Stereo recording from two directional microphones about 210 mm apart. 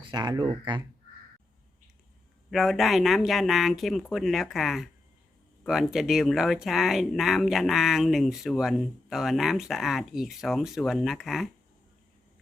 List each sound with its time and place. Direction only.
0.1 s speech: 20° right (ahead or behind)
2.5 s speech: centre (ahead or behind)